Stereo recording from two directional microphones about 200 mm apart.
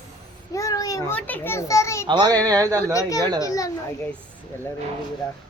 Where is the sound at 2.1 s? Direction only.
20° right (ahead or behind).